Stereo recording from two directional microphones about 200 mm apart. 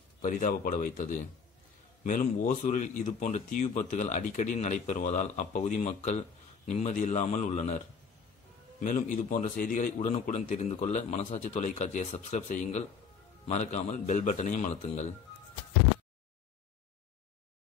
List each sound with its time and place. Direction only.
0.2 s speech: 40° left (ahead or behind)
8.8 s speech: 40° left (ahead or behind)